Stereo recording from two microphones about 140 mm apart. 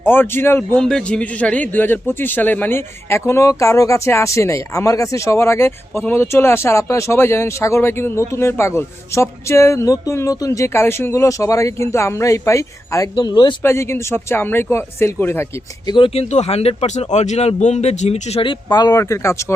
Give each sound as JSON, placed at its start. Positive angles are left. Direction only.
{"t": 0.0, "sound": "speech", "side_deg": 15}
{"t": 0.8, "sound": "a man's voice", "side_deg": 5}
{"t": 13.1, "sound": "speech", "side_deg": 35}
{"t": 13.6, "sound": "speech", "side_deg": 20}
{"t": 15.9, "sound": "speech", "side_deg": 40}